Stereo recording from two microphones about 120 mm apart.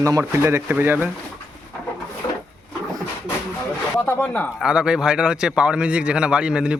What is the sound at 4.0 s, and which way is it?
Speech, 15° left (ahead or behind).